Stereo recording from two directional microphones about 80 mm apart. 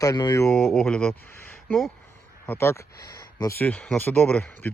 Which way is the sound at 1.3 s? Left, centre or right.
Left.